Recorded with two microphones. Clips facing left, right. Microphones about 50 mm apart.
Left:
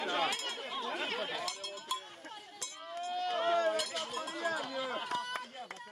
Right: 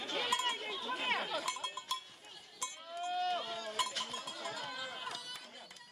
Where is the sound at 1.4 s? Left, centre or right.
Right.